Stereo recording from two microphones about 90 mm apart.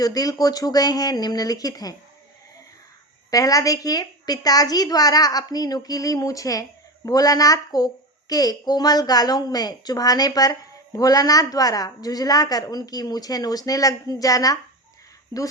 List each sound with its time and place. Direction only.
0.0 s a woman's voice: 45° left (ahead or behind)
3.2 s a woman's voice: 40° left (ahead or behind)